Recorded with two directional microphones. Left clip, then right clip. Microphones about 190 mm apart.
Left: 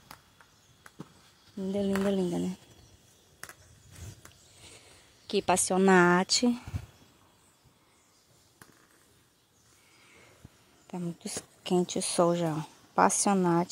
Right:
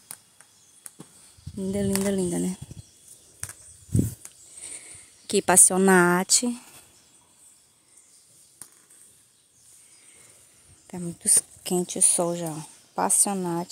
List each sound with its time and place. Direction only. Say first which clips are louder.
1.6 s speech: right 3 dB; 35° right (ahead or behind)
4.6 s speech: right 8 dB; 45° right (ahead or behind); by 6.4 s 20° right (ahead or behind)
6.4 s speech: left 1 dB; 5° right (ahead or behind)
10.9 s a woman's voice: right 9 dB; 25° right (ahead or behind); by 13.7 s 5° right (ahead or behind)